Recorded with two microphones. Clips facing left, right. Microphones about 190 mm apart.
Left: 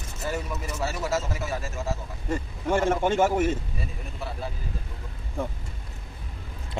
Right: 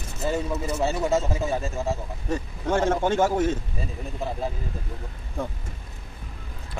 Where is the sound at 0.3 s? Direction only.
30° right (ahead or behind).